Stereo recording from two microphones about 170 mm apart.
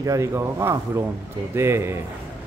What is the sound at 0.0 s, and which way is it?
Speech, 20° right (ahead or behind).